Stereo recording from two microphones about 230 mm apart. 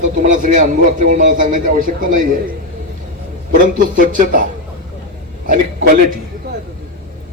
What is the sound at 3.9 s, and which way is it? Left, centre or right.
Speech, right.